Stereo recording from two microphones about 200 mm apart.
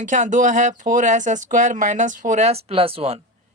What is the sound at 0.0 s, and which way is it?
A woman's voice, 40° right (ahead or behind).